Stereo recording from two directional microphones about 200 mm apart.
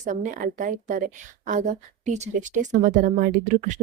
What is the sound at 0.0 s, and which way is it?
Speech, 40° right (ahead or behind).